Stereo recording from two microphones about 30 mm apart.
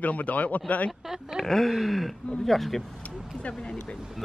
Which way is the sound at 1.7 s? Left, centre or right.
Centre.